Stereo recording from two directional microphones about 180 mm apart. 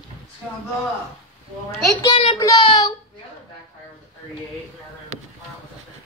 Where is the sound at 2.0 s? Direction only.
25° left (ahead or behind).